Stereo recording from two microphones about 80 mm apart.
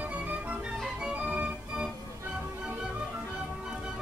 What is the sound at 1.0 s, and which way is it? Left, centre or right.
Organ, centre.